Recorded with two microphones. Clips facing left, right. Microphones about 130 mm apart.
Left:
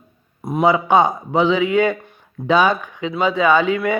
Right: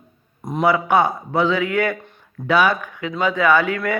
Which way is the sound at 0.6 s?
20° left (ahead or behind).